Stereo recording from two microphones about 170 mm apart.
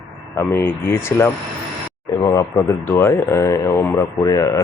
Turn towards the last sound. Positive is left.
turn(degrees=20)  # may be behind; listen again after turning